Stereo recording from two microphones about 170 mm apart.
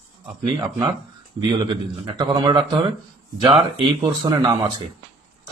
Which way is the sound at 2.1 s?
30° right (ahead or behind).